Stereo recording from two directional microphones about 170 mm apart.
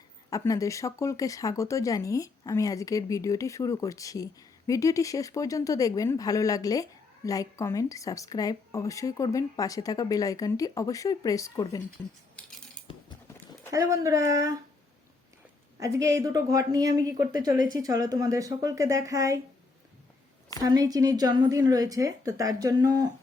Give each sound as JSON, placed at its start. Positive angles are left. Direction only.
{"t": 0.3, "sound": "speech", "side_deg": 20}
{"t": 13.7, "sound": "a woman's voice", "side_deg": -20}
{"t": 15.8, "sound": "a woman's voice", "side_deg": -20}
{"t": 20.6, "sound": "a woman's voice", "side_deg": -20}